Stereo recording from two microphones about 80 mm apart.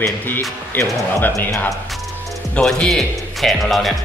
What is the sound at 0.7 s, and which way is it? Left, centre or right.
Speech, left.